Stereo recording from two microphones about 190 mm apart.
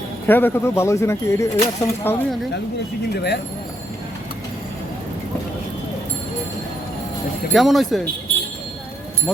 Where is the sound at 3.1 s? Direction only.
60° left (ahead or behind).